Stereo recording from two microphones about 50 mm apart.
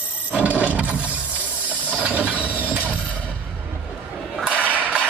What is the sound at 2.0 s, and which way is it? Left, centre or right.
Vehicle, right.